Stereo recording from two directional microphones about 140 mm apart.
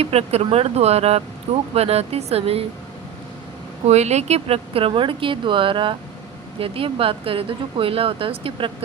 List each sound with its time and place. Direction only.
0.0 s speech: 45° right (ahead or behind)
3.8 s speech: 50° right (ahead or behind)